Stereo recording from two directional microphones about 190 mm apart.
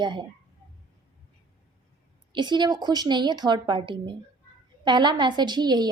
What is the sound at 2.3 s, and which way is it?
A woman's voice, 25° right (ahead or behind).